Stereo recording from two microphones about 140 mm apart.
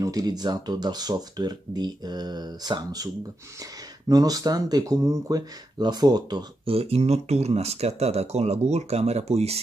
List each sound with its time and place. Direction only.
0.0 s speech: 25° right (ahead or behind)
4.1 s speech: 25° right (ahead or behind)
6.7 s speech: 45° right (ahead or behind)